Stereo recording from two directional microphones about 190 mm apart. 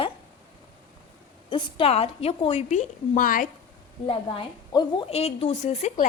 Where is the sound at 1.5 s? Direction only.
30° left (ahead or behind); by 3.5 s 45° left (ahead or behind).